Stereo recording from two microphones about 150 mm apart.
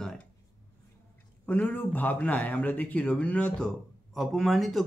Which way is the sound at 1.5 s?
10° left (ahead or behind).